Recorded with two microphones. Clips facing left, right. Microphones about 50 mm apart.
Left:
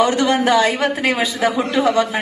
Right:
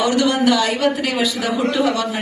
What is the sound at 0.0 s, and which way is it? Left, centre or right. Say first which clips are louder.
A man's voice: left 1 dB; left.